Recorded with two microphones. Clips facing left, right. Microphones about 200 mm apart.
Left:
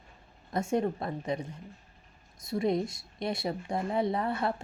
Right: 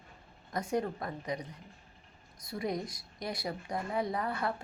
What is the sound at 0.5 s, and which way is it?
Speech, 25° left (ahead or behind).